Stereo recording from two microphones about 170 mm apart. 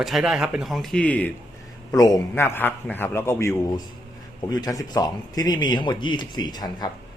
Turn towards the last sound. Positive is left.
turn(degrees=25)  # may be behind; listen again after turning